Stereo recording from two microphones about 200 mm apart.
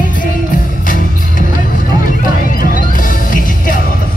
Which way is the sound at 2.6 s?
45° left (ahead or behind).